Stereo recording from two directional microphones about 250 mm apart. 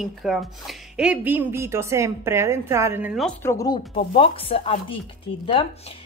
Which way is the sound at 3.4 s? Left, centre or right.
Centre.